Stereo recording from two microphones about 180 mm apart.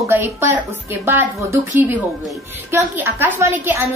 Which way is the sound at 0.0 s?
15° right (ahead or behind).